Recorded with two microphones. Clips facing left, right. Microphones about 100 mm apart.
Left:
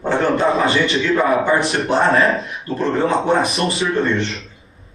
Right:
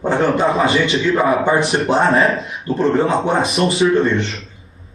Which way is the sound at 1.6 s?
30° right (ahead or behind).